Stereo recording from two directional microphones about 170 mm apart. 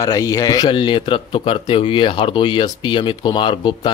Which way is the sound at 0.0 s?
20° left (ahead or behind).